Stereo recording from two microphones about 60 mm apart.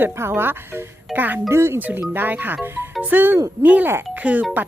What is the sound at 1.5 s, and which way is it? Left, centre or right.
Speech, right.